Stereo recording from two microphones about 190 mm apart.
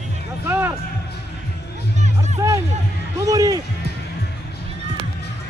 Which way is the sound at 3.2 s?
20° right (ahead or behind).